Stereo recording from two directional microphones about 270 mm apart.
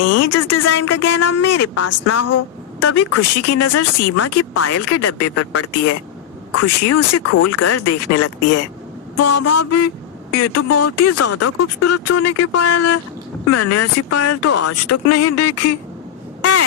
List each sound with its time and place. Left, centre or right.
0.0 s speech: left